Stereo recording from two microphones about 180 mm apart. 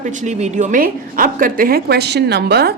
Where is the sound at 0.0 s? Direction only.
45° right (ahead or behind).